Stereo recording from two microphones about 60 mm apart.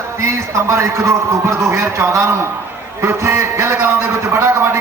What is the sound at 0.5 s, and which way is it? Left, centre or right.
A man's voice, right.